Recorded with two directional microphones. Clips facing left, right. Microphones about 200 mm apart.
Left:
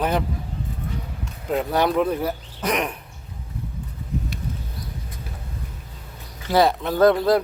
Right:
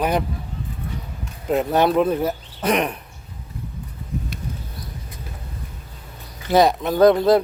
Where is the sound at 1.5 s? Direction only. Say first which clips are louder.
Right 3 dB; 25° right (ahead or behind).